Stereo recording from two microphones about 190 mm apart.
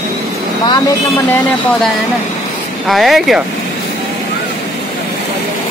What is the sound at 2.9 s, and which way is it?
Speech, centre (ahead or behind).